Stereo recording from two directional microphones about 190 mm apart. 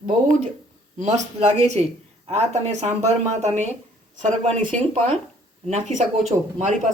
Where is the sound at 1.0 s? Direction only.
40° right (ahead or behind).